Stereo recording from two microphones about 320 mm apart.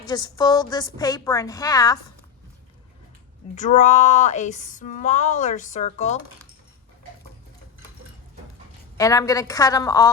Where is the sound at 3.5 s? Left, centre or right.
Left.